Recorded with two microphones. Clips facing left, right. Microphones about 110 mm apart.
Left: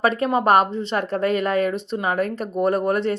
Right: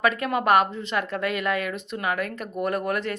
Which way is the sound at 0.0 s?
30° left (ahead or behind).